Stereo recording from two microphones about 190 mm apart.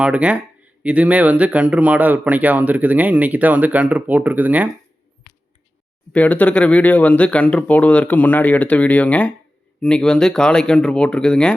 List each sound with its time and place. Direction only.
0.0 s speech: 5° right (ahead or behind)
6.1 s speech: 5° left (ahead or behind)